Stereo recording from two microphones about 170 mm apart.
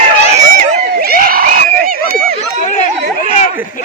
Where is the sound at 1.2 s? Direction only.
60° right (ahead or behind).